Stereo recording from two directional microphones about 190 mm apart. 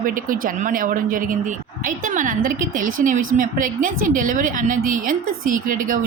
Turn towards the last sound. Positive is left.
turn(degrees=-45)  # may be behind; listen again after turning